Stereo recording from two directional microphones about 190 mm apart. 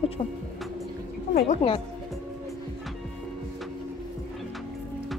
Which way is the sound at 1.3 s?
35° left (ahead or behind).